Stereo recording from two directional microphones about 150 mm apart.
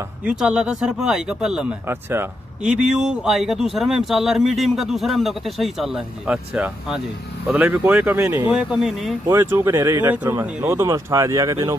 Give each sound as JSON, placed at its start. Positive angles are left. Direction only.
{"t": 0.2, "sound": "speech", "side_deg": -5}
{"t": 1.9, "sound": "speech", "side_deg": -15}
{"t": 9.3, "sound": "speech", "side_deg": -15}